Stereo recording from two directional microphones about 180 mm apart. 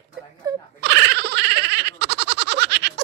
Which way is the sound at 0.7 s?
65° right (ahead or behind).